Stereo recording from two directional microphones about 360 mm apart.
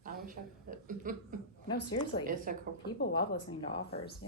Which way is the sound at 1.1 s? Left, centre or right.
Right.